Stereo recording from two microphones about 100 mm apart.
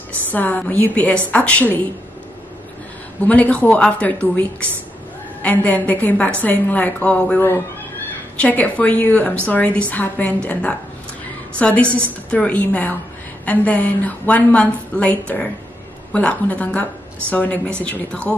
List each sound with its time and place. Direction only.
0.3 s a woman's voice: 15° left (ahead or behind)
3.3 s a woman's voice: 15° left (ahead or behind)